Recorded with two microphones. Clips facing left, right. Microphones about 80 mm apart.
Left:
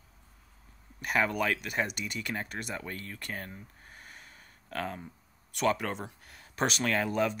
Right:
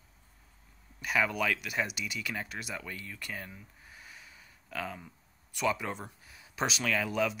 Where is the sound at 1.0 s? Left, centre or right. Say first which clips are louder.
Left 1 dB; left.